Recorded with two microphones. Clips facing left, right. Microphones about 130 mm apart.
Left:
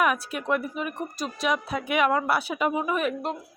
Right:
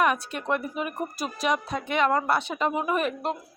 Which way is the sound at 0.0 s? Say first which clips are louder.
Even; 5° left (ahead or behind).